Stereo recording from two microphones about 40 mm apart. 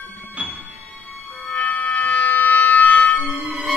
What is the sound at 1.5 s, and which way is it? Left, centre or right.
Music, left.